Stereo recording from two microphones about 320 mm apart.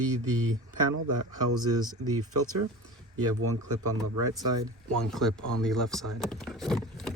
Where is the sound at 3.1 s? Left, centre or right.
Right.